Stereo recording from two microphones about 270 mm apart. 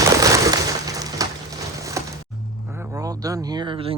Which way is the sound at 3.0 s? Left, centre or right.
Centre.